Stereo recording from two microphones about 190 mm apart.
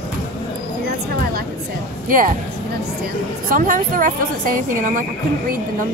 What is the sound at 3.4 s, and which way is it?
A woman's voice, 45° right (ahead or behind).